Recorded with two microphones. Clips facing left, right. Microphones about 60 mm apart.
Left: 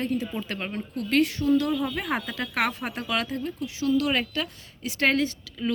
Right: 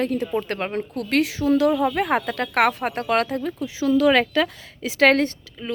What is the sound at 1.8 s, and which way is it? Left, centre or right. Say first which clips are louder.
Speech: right 7 dB; right.